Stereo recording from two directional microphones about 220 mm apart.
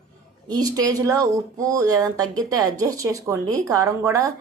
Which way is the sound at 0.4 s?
20° right (ahead or behind).